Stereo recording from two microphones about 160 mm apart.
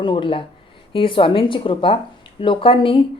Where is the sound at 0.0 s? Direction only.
30° left (ahead or behind).